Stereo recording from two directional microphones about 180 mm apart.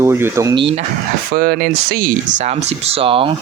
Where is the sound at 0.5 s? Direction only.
30° right (ahead or behind).